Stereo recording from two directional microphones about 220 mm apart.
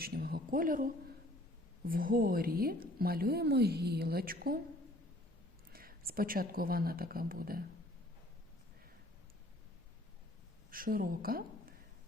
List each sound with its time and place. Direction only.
0.0 s a woman's voice: 45° right (ahead or behind)
1.9 s a woman's voice: 40° right (ahead or behind)
5.7 s speech: 40° right (ahead or behind)
10.7 s a woman's voice: 40° right (ahead or behind)